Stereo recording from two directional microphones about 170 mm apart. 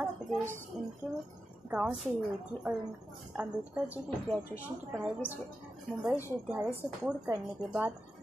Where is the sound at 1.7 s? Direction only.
10° right (ahead or behind).